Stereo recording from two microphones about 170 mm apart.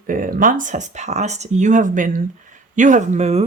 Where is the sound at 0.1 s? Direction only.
55° right (ahead or behind).